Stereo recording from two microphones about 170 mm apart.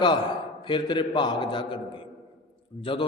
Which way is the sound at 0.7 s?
30° left (ahead or behind).